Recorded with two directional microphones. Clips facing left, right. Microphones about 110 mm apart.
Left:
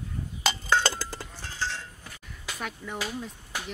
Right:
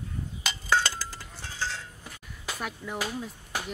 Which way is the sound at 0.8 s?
30° left (ahead or behind).